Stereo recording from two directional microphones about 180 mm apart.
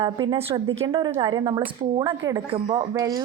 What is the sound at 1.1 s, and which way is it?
Speech, 25° right (ahead or behind).